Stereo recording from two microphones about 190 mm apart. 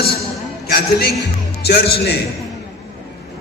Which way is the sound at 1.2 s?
60° left (ahead or behind).